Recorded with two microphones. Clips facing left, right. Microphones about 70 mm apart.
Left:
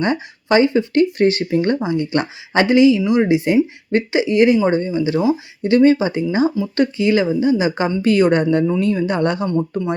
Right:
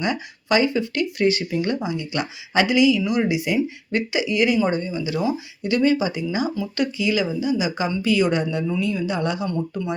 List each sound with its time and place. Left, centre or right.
0.0 s speech: left